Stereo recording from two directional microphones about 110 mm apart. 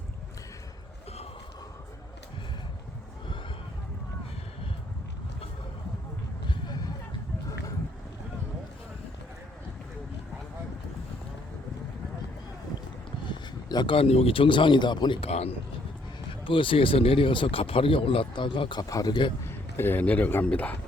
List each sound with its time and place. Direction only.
6.5 s a sound: 35° left (ahead or behind)
13.2 s a sound: 45° left (ahead or behind)
13.9 s speech: 65° left (ahead or behind); by 15.2 s 45° left (ahead or behind)
15.2 s speech: 65° left (ahead or behind)
16.4 s speech: 50° left (ahead or behind)
19.5 s speech: 20° left (ahead or behind)